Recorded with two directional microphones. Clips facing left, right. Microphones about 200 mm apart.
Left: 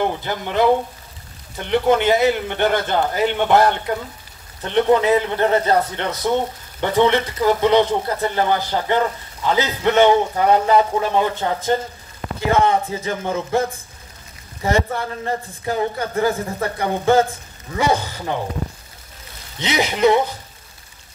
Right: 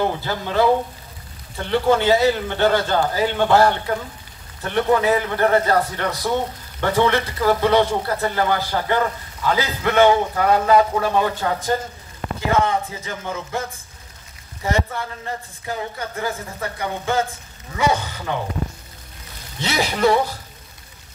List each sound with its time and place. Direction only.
0.0 s a man's voice: 20° left (ahead or behind)
19.6 s a man's voice: 20° left (ahead or behind)